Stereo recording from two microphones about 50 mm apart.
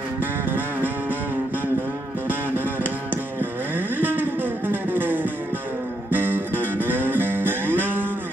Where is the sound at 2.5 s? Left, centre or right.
Right.